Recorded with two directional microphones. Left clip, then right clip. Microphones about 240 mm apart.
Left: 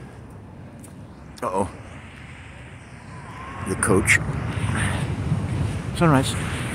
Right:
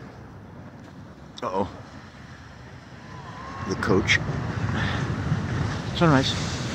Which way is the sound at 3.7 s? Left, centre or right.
Centre.